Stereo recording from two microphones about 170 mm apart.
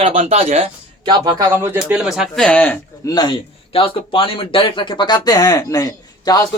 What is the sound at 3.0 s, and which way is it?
Speech, 25° left (ahead or behind).